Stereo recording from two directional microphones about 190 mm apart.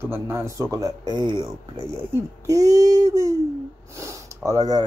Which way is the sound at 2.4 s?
20° right (ahead or behind).